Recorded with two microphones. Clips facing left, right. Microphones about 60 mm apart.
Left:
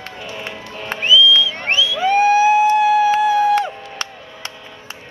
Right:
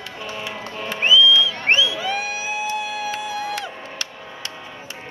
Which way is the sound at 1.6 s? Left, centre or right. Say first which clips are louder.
Even; right.